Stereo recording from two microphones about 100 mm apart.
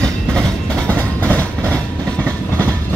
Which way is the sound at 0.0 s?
10° left (ahead or behind).